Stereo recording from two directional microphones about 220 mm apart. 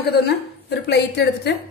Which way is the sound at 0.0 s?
45° left (ahead or behind).